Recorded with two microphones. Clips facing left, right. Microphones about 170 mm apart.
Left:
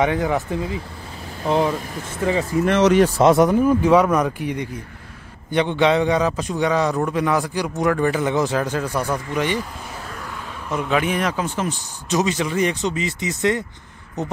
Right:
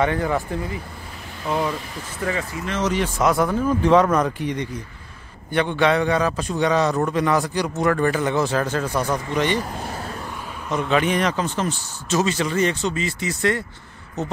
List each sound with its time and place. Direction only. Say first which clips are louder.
0.0 s a man's voice: left 1 dB; 15° left (ahead or behind)
1.4 s speech: left 4 dB; 25° left (ahead or behind)
2.6 s speech: left 9 dB; 60° left (ahead or behind)
3.0 s a man's voice: left 6 dB; 30° left (ahead or behind); by 9.6 s 10° left (ahead or behind)
10.7 s a man's voice: right 1 dB; 5° left (ahead or behind)